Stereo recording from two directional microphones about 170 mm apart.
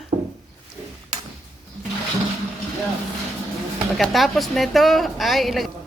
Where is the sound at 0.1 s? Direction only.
40° right (ahead or behind).